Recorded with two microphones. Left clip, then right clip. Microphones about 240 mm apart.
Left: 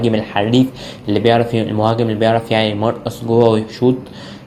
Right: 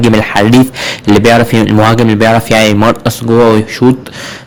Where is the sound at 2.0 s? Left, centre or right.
Right.